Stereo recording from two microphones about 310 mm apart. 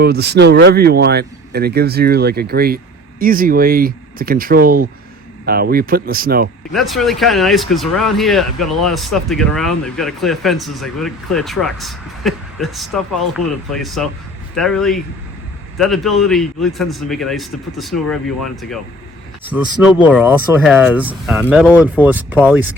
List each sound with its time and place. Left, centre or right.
0.0 s speech: right
6.7 s speech: centre
19.5 s speech: centre